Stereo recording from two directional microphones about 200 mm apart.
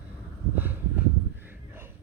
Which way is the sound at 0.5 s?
10° right (ahead or behind).